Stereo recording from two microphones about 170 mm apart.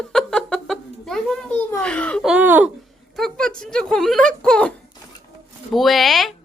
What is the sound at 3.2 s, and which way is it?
Speech, 5° left (ahead or behind).